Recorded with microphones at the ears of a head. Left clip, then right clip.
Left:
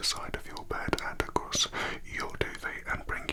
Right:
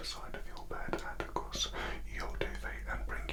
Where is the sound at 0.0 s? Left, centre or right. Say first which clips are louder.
Left 10 dB; left.